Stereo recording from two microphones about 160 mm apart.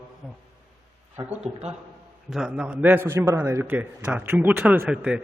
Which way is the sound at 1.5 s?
40° right (ahead or behind).